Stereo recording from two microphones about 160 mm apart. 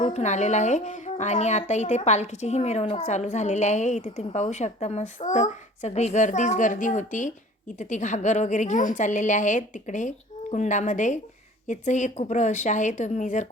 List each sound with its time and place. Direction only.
0.0 s a woman's voice: 45° left (ahead or behind)